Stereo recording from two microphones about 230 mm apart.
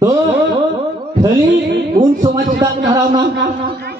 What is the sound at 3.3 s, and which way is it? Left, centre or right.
Speech, right.